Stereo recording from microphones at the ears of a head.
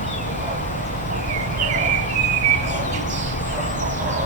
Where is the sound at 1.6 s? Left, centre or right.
Right.